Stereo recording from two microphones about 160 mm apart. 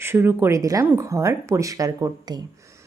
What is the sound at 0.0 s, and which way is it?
A woman's voice, 15° right (ahead or behind).